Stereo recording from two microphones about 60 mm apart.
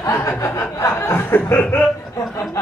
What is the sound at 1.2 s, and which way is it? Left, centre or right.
Chuckle, left.